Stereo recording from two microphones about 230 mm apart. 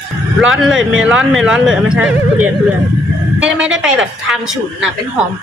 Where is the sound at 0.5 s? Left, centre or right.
Centre.